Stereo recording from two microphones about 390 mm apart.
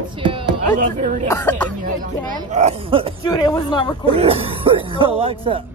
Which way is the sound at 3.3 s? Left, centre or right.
Centre.